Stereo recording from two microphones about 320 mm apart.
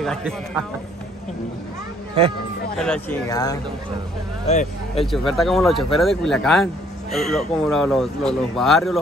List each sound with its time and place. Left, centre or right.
0.0 s a man's voice: centre
2.8 s speech: centre
5.0 s speech: centre